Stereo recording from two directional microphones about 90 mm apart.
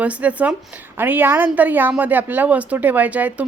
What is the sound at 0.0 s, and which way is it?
A woman's voice, 15° right (ahead or behind).